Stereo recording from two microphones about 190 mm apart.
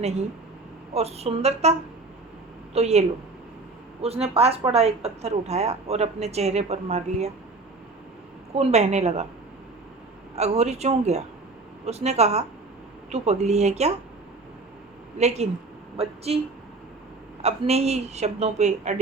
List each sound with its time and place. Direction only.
0.9 s a woman's voice: 35° right (ahead or behind)
2.7 s a woman's voice: 35° right (ahead or behind)
4.0 s a woman's voice: 30° right (ahead or behind)
8.5 s a woman's voice: 35° right (ahead or behind)
10.3 s a woman's voice: 35° right (ahead or behind)
15.2 s a woman's voice: 35° right (ahead or behind)
17.4 s a woman's voice: 35° right (ahead or behind)